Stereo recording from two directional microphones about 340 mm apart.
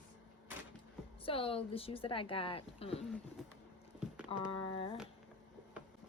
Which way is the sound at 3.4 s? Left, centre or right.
Centre.